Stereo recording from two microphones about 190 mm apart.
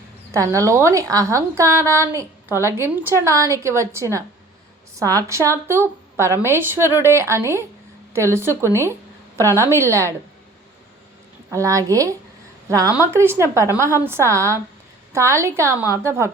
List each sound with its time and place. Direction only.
0.5 s a woman's voice: 15° right (ahead or behind)
11.5 s a woman's voice: 15° right (ahead or behind)